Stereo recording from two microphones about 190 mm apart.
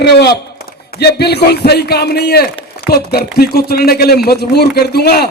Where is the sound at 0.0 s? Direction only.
60° left (ahead or behind).